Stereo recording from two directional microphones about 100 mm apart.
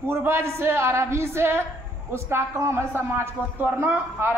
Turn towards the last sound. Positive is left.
turn(degrees=-25)  # may be behind; listen again after turning